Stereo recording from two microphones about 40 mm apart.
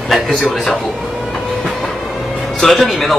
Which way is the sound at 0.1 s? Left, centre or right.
Centre.